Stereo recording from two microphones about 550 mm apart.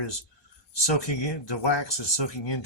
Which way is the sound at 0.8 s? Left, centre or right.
Left.